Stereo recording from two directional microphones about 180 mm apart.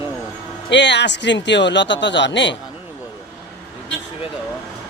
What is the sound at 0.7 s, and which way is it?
Speech, 75° left (ahead or behind).